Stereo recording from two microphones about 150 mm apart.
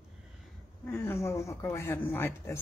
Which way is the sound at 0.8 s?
15° left (ahead or behind).